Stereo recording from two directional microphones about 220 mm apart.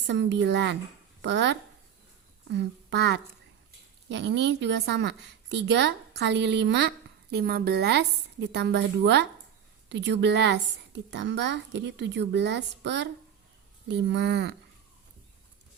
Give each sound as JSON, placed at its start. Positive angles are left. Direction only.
{"t": 0.1, "sound": "a woman's voice", "side_deg": -55}